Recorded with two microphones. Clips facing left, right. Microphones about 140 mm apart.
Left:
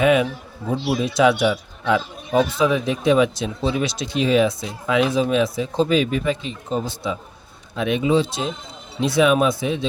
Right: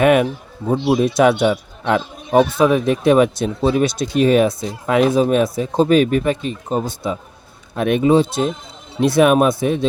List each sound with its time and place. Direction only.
0.0 s a man's voice: 55° right (ahead or behind)